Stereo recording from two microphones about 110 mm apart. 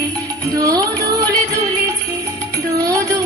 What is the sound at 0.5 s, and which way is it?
Music, 35° right (ahead or behind).